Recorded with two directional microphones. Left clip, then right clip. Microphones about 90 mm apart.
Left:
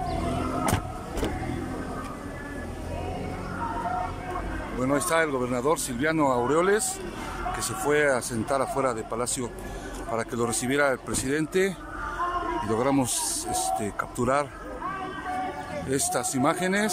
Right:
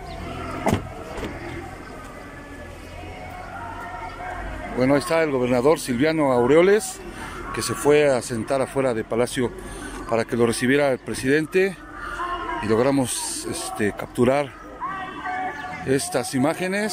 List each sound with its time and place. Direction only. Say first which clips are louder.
4.7 s speech: right 5 dB; 15° right (ahead or behind)
13.7 s speech: right 6 dB; 15° right (ahead or behind)
15.9 s speech: right 5 dB; 10° right (ahead or behind)